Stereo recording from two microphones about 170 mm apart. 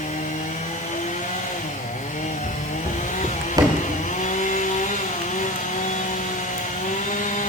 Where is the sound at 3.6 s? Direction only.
20° right (ahead or behind).